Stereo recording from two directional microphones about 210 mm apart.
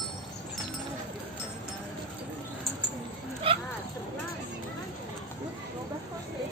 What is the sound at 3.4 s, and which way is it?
Dog, 25° right (ahead or behind).